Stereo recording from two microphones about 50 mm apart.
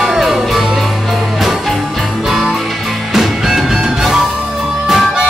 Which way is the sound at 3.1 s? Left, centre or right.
Centre.